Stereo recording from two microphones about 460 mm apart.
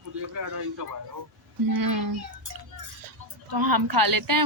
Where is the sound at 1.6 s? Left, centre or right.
Right.